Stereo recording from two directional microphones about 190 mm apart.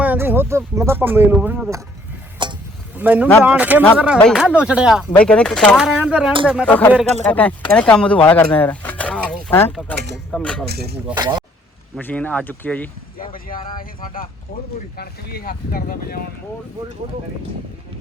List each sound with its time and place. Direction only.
0.0 s speech: 10° right (ahead or behind)
2.4 s a sound: 25° right (ahead or behind)
3.0 s speech: 10° right (ahead or behind)
5.1 s speech: 5° left (ahead or behind)
6.7 s speech: 10° left (ahead or behind)
10.7 s speech: 55° right (ahead or behind)
11.1 s speech: 20° right (ahead or behind)
11.9 s speech: 10° left (ahead or behind)
14.0 s speech: 50° left (ahead or behind)